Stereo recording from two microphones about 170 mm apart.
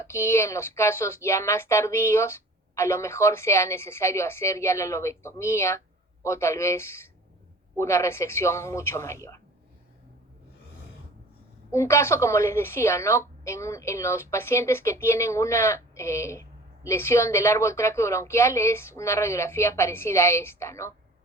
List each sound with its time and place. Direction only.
0.1 s a woman's voice: 15° left (ahead or behind)
11.7 s a woman's voice: 15° left (ahead or behind)